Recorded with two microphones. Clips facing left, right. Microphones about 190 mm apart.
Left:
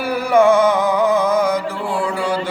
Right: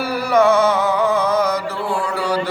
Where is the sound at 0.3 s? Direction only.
15° left (ahead or behind).